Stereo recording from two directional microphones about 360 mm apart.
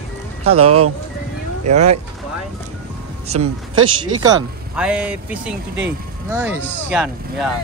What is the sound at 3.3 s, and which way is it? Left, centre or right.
Speech, right.